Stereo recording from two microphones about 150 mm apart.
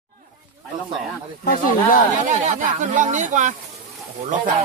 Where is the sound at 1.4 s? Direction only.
70° left (ahead or behind).